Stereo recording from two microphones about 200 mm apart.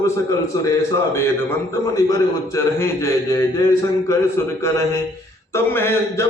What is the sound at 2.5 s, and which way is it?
A man's voice, 15° left (ahead or behind).